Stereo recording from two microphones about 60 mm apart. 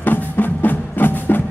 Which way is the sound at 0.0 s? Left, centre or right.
Left.